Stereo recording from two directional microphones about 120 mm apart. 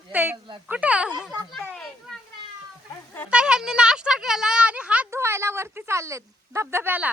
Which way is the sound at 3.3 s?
5° right (ahead or behind).